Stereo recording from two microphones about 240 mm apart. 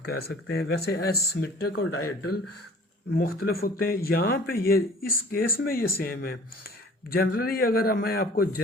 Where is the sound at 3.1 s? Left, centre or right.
Left.